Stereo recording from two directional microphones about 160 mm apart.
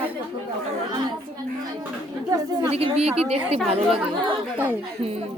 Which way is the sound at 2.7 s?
40° right (ahead or behind).